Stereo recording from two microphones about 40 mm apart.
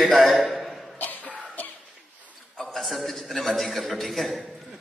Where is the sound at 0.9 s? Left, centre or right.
Left.